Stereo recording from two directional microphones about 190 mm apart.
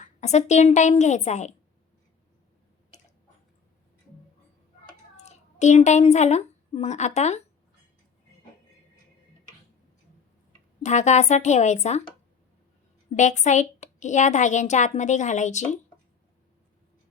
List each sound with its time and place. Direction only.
0.0 s a woman's voice: 35° left (ahead or behind)
5.1 s a child's voice: 35° left (ahead or behind)
10.8 s a woman's voice: 40° left (ahead or behind)
13.1 s a woman's voice: 40° left (ahead or behind)